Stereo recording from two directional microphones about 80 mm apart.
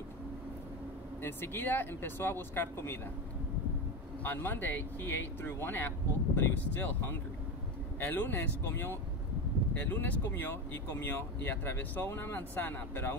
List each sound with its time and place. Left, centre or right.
1.2 s speech: left
4.2 s speech: left